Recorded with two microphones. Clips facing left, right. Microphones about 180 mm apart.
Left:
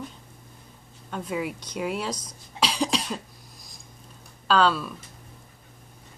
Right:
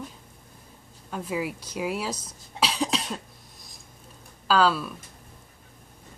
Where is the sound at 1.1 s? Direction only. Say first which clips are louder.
Even; 5° right (ahead or behind).